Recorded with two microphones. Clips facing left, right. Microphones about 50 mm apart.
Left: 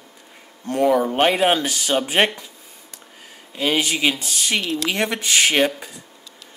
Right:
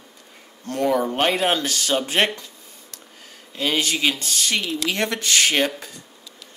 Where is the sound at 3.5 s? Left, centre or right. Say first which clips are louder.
Left 2 dB; centre.